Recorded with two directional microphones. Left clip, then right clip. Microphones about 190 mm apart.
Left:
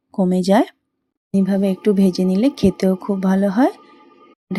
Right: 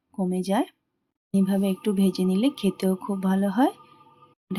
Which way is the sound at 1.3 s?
15° left (ahead or behind).